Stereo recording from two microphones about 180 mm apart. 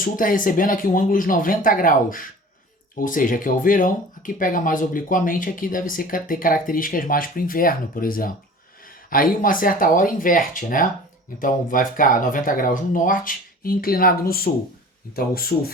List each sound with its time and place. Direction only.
0.0 s a man's voice: 50° left (ahead or behind)